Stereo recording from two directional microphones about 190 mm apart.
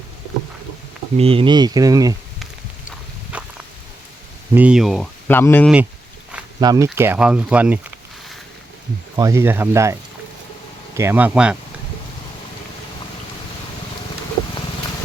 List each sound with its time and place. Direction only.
1.1 s speech: 30° right (ahead or behind)
3.3 s a sound: 5° right (ahead or behind)
4.5 s speech: 5° right (ahead or behind)
5.3 s speech: 10° left (ahead or behind)
6.6 s speech: 20° right (ahead or behind)
9.1 s speech: 15° right (ahead or behind)